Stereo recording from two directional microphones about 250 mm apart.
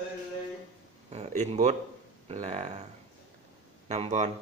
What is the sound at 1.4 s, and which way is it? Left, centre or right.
A man's voice, right.